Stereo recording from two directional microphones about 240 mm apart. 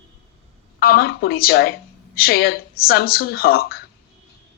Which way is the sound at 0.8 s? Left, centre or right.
Left.